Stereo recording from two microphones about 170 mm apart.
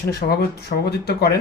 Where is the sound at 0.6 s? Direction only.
80° left.